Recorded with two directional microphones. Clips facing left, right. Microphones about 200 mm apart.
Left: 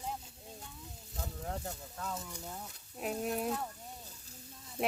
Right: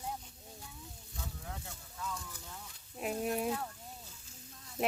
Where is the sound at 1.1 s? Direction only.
40° left (ahead or behind).